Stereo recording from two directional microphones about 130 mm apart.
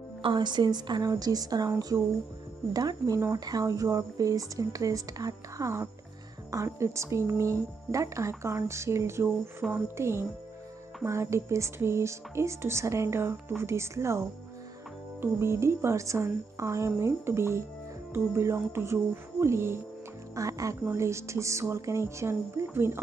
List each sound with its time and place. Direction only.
0.2 s a woman's voice: 35° right (ahead or behind)
2.7 s speech: 30° right (ahead or behind)